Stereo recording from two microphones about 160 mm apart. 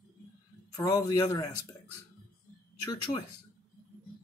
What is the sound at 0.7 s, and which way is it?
Speech, 25° left (ahead or behind).